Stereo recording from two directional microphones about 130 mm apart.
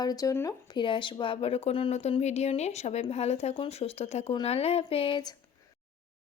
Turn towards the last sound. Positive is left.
turn(degrees=35)  # may be behind; listen again after turning